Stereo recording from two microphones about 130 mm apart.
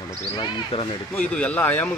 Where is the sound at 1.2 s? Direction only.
10° left (ahead or behind).